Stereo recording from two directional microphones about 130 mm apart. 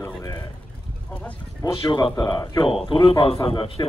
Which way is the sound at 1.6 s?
35° left (ahead or behind).